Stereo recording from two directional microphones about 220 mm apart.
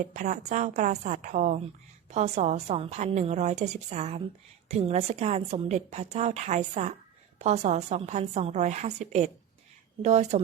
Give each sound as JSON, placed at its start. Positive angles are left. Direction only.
{"t": 0.1, "sound": "a woman's voice", "side_deg": -35}